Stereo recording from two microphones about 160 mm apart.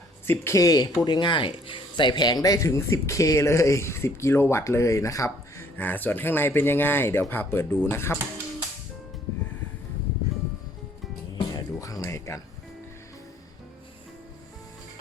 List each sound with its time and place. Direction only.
0.3 s speech: 20° left (ahead or behind)
11.3 s music: 25° left (ahead or behind)